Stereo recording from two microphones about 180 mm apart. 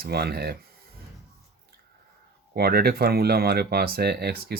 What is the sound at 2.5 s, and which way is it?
Speech, 60° right (ahead or behind).